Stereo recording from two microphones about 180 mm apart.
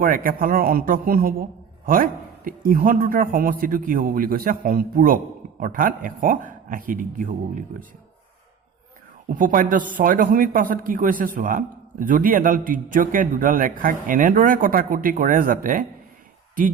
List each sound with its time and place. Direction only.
0.0 s speech: 50° right (ahead or behind)
9.3 s speech: 50° right (ahead or behind)